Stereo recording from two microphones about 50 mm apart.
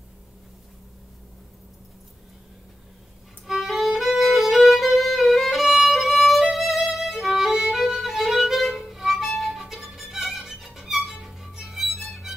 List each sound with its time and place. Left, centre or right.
3.4 s violin: centre